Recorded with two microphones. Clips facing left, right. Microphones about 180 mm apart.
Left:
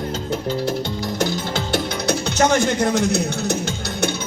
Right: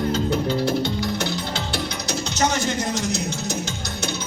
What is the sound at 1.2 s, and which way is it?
Music, 50° left (ahead or behind).